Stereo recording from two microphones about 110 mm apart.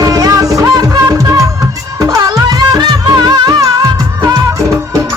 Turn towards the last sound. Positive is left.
turn(degrees=-40)  # may be behind; listen again after turning